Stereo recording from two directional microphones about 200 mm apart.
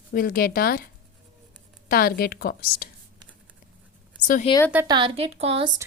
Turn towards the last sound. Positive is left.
turn(degrees=-30)  # may be behind; listen again after turning